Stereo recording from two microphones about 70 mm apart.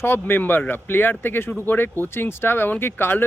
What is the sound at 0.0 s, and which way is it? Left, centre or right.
Speech, left.